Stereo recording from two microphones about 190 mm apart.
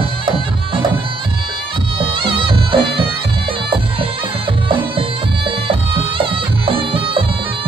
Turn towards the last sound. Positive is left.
turn(degrees=-30)  # may be behind; listen again after turning